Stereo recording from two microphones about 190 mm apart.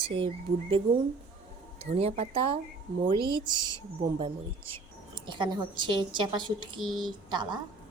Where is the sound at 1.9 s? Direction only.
30° right (ahead or behind).